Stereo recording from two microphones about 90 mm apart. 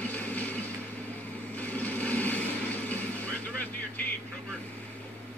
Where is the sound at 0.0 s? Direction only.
15° left (ahead or behind).